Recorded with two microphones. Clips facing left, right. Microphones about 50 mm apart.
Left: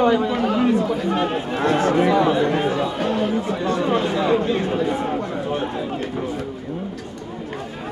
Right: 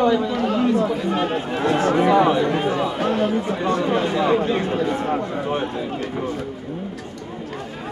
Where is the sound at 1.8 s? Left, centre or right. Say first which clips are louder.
Even; centre.